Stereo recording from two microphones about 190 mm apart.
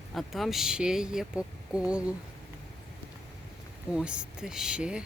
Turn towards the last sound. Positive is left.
turn(degrees=-5)  # may be behind; listen again after turning